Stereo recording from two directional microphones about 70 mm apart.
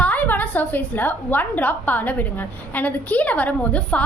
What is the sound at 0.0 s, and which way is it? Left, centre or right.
A woman's voice, left.